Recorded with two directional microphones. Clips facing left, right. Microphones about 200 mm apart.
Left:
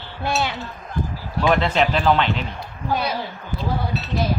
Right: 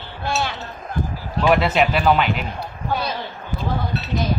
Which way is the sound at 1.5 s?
5° right (ahead or behind).